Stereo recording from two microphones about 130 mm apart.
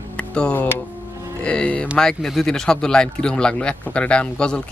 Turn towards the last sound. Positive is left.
turn(degrees=5)  # may be behind; listen again after turning